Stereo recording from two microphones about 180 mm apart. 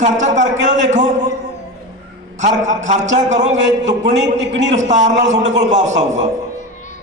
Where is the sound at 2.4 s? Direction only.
40° right (ahead or behind).